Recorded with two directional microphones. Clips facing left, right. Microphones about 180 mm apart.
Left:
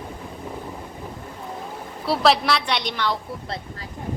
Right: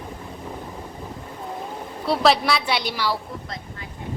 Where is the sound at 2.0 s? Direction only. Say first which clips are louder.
Even; centre (ahead or behind).